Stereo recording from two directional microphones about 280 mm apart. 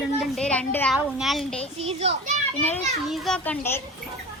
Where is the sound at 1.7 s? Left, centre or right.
Right.